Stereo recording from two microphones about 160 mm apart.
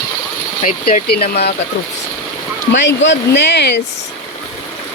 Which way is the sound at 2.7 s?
90° left.